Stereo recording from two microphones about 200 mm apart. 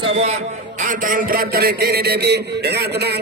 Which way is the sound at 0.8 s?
45° right (ahead or behind).